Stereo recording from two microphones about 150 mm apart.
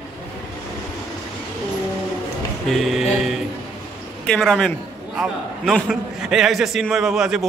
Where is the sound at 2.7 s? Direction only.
Centre (ahead or behind).